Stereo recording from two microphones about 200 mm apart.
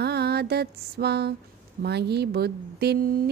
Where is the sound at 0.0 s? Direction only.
55° right (ahead or behind).